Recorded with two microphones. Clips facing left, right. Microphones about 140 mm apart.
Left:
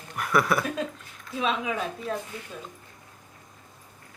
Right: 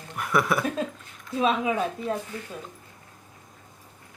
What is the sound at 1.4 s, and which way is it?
Speech, 35° right (ahead or behind).